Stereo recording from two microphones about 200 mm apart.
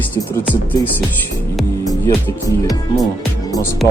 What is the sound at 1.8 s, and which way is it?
Speech, 15° left (ahead or behind).